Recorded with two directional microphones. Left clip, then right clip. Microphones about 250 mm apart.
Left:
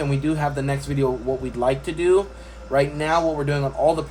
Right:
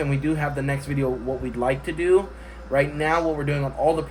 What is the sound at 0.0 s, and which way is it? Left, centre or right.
Speech, centre.